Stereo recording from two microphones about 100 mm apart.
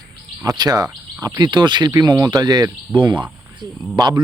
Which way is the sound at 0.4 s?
40° right (ahead or behind).